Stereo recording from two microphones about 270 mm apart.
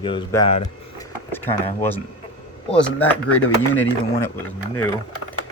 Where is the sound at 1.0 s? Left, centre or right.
Centre.